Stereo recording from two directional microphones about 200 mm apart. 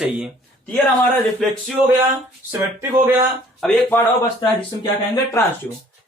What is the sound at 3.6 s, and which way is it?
Speech, 5° left (ahead or behind).